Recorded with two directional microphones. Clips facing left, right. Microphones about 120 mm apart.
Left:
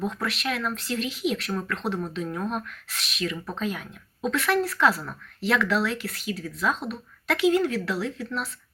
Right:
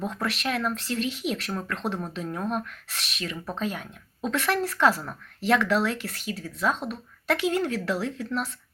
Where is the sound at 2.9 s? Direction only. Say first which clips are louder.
Left 4 dB; 40° right (ahead or behind).